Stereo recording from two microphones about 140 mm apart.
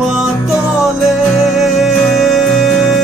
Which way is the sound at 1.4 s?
Centre (ahead or behind).